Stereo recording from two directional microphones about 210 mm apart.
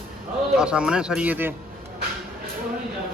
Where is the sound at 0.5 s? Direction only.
5° right (ahead or behind).